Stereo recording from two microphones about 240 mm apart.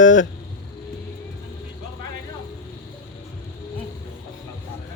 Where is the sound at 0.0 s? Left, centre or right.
Left.